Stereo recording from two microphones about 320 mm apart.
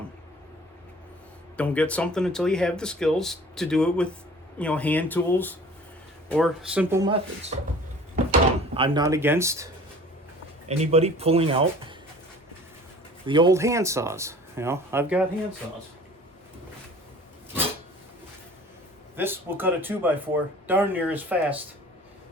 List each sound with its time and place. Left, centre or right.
1.5 s speech: centre
8.1 s drawer open or close: right
10.7 s speech: centre
13.2 s speech: centre
19.1 s speech: centre